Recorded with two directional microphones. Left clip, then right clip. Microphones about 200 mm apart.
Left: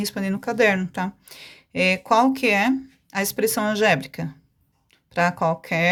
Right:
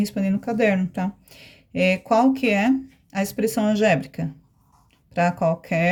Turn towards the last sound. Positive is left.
turn(degrees=20)  # may be behind; listen again after turning